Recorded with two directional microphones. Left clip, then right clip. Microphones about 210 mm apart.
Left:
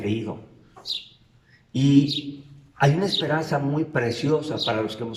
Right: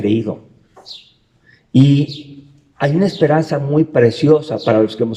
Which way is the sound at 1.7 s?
45° right (ahead or behind).